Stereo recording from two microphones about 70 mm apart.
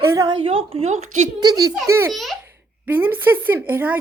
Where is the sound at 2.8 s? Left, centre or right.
Right.